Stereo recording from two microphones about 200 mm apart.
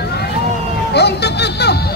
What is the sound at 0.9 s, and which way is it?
Speech, 55° left (ahead or behind).